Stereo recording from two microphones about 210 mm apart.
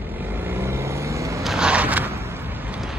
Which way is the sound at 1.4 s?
5° right (ahead or behind).